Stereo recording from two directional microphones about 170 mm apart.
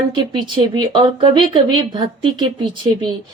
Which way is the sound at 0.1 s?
25° right (ahead or behind).